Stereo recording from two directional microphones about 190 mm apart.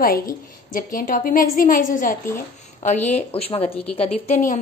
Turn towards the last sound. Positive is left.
turn(degrees=40)  # may be behind; listen again after turning